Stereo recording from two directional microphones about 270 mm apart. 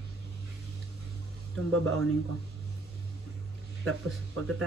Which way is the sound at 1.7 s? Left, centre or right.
Right.